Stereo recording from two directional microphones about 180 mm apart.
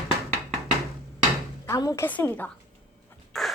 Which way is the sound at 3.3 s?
Centre (ahead or behind).